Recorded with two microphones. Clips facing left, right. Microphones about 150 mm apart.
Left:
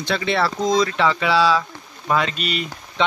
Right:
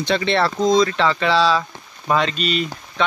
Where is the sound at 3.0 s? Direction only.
20° left (ahead or behind).